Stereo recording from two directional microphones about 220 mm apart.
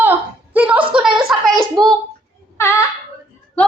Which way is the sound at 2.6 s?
15° left (ahead or behind).